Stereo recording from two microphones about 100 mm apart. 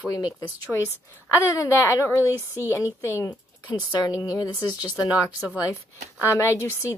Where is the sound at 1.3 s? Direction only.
30° left (ahead or behind).